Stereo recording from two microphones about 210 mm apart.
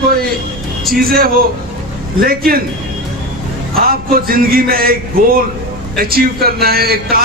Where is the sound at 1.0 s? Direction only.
45° right (ahead or behind).